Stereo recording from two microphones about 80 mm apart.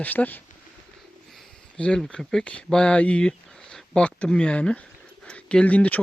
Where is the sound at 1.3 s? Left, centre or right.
Centre.